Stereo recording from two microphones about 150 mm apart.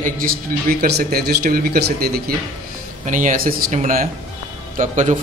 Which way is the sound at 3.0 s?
60° right (ahead or behind).